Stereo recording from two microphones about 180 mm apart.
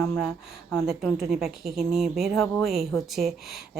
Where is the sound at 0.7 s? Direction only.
5° left (ahead or behind).